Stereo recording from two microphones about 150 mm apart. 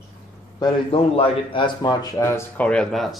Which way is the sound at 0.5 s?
25° left (ahead or behind).